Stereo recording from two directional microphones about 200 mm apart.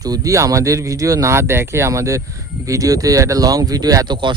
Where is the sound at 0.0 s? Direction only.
15° right (ahead or behind).